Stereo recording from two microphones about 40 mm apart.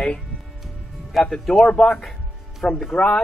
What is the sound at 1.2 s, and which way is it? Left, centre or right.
Speech, centre.